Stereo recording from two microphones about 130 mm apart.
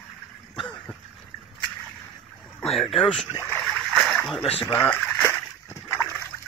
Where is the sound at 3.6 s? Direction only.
Centre (ahead or behind).